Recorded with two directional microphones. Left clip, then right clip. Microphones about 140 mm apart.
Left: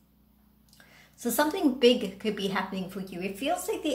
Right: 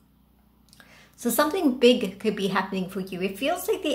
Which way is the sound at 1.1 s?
20° right (ahead or behind).